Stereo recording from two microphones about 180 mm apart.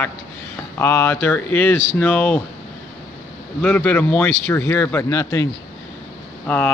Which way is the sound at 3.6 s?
5° left (ahead or behind).